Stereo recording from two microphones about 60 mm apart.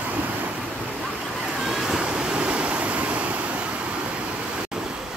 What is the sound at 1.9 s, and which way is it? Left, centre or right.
Waves, centre.